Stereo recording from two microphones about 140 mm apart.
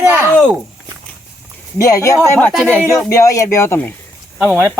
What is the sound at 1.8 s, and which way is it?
Speech, 25° left (ahead or behind).